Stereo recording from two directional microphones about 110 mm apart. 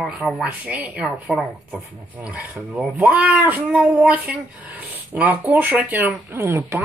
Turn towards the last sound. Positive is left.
turn(degrees=-25)  # may be behind; listen again after turning